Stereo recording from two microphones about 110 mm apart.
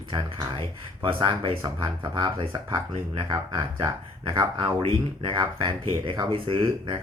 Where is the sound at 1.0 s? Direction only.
50° right (ahead or behind).